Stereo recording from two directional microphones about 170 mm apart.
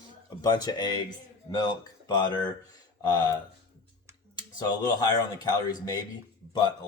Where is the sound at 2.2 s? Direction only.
25° left (ahead or behind).